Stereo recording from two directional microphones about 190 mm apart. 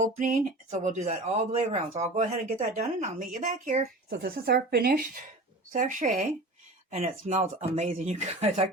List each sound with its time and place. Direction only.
0.0 s speech: 45° right (ahead or behind)
4.1 s speech: 60° right (ahead or behind); by 8.6 s 35° right (ahead or behind)